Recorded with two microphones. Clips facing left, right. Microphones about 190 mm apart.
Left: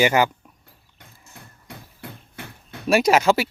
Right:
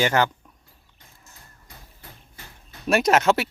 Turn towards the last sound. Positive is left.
turn(degrees=0)  # may be behind; listen again after turning